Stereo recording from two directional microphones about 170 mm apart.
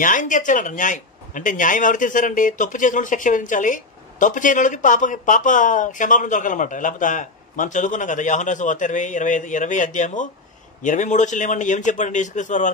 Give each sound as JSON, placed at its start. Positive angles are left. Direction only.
{"t": 0.0, "sound": "speech", "side_deg": 50}